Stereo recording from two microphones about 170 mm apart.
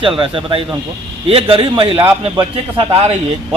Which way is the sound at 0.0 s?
30° right (ahead or behind).